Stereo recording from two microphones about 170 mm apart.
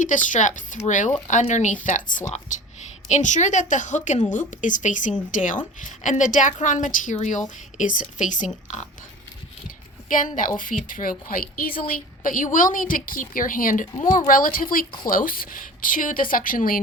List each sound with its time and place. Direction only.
0.0 s a woman's voice: 50° left (ahead or behind)
10.1 s a woman's voice: 50° left (ahead or behind)